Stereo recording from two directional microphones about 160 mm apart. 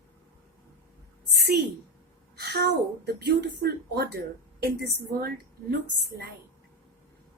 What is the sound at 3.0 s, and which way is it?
A woman's voice, 90° right.